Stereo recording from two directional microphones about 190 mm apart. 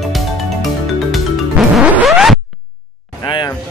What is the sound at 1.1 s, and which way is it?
Music, centre (ahead or behind).